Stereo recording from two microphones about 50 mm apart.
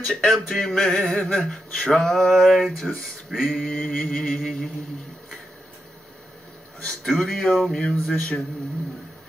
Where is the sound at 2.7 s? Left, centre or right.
Centre.